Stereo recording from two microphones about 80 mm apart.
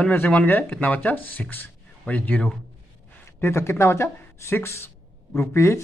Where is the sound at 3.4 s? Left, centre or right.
Left.